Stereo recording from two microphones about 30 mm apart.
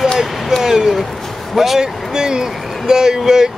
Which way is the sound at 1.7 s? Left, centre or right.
Right.